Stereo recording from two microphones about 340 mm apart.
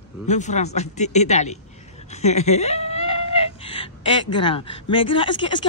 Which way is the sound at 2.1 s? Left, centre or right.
Centre.